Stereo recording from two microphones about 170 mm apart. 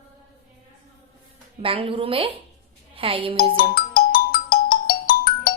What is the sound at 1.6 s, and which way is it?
A woman's voice, 35° right (ahead or behind).